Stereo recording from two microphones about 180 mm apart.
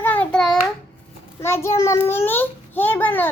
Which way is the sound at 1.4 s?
15° left (ahead or behind).